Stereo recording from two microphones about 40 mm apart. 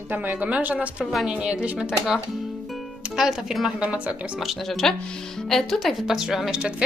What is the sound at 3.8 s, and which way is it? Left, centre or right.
Speech, right.